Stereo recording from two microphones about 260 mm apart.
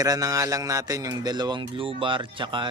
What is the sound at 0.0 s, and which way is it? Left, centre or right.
Speech, centre.